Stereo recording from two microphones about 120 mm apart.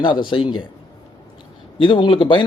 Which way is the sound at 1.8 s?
40° left (ahead or behind).